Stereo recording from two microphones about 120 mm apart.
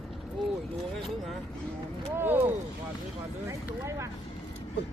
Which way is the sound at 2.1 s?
20° right (ahead or behind).